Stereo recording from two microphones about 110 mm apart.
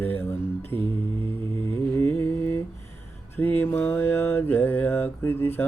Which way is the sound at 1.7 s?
20° left (ahead or behind).